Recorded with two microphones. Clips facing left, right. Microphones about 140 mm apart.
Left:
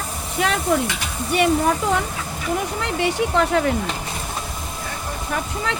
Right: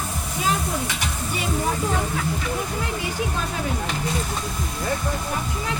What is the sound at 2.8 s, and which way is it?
Vehicle, 70° left (ahead or behind).